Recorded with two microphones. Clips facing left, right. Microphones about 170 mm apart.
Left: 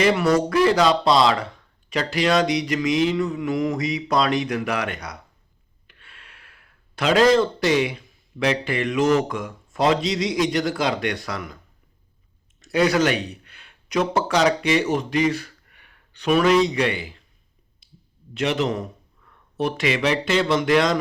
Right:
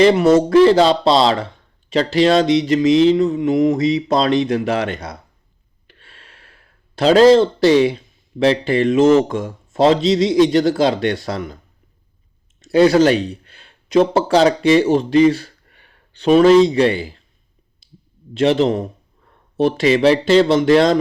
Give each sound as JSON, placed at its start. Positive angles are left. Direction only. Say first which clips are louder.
{"t": 0.0, "sound": "speech", "louder": "right 7 dB", "side_deg": -25}
{"t": 12.5, "sound": "speech", "louder": "right 8 dB", "side_deg": -30}
{"t": 18.3, "sound": "speech", "louder": "right 8 dB", "side_deg": -30}